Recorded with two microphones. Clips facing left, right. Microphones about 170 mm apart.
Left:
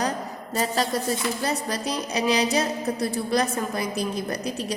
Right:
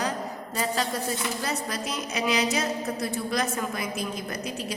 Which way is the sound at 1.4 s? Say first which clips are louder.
Left 4 dB; 35° left (ahead or behind).